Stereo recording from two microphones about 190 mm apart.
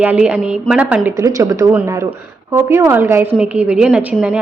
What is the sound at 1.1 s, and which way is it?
A woman's voice, 15° right (ahead or behind).